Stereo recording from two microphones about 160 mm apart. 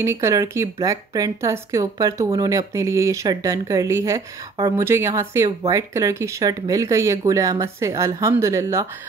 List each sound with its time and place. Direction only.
0.0 s speech: 15° right (ahead or behind)